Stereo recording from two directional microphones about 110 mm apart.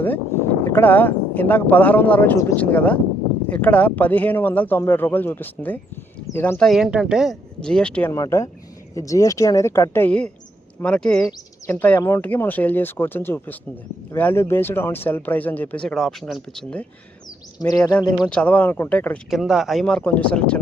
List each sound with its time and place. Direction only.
0.0 s speech: 15° left (ahead or behind)
6.6 s speech: centre (ahead or behind)
8.1 s speech: 30° left (ahead or behind); by 11.3 s 5° left (ahead or behind)
11.3 s speech: 25° left (ahead or behind); by 16.8 s 5° left (ahead or behind)
17.6 s speech: 35° left (ahead or behind)
18.3 s speech: 10° left (ahead or behind)
19.3 s speech: centre (ahead or behind)
19.8 s speech: 10° left (ahead or behind)